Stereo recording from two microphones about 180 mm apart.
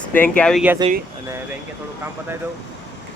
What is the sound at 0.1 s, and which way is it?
Speech, 10° left (ahead or behind).